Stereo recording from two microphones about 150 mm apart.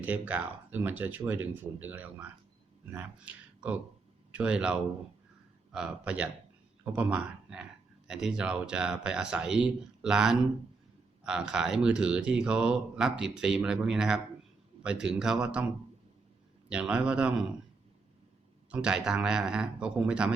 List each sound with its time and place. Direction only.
0.0 s speech: 10° right (ahead or behind)
16.6 s speech: 5° right (ahead or behind)
18.7 s speech: 5° right (ahead or behind)